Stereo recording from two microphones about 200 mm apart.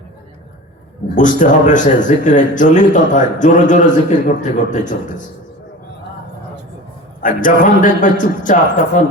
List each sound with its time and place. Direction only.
1.1 s speech: 40° left (ahead or behind)
7.2 s speech: 40° left (ahead or behind)